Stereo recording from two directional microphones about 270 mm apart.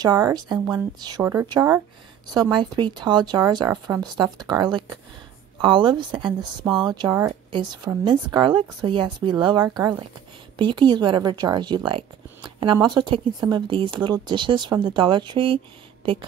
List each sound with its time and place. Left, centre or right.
0.0 s speech: centre